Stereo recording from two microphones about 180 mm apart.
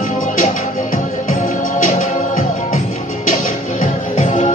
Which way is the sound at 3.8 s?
45° left (ahead or behind).